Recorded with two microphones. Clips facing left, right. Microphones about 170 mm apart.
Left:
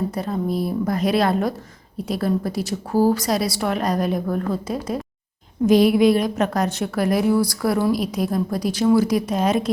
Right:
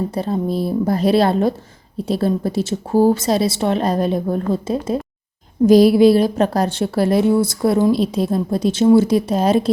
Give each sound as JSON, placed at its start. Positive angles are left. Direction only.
{"t": 0.1, "sound": "a woman's voice", "side_deg": -30}